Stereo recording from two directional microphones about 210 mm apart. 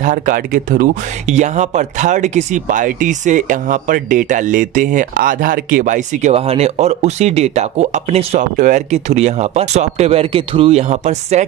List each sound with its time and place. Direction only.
0.0 s speech: 40° right (ahead or behind)